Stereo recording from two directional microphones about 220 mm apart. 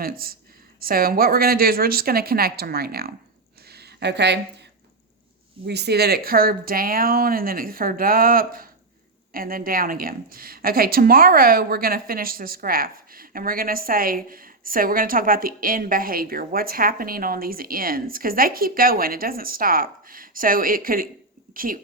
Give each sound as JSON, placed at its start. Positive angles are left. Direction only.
{"t": 0.0, "sound": "speech", "side_deg": -40}
{"t": 3.7, "sound": "a sound", "side_deg": -45}
{"t": 5.6, "sound": "a woman's voice", "side_deg": -50}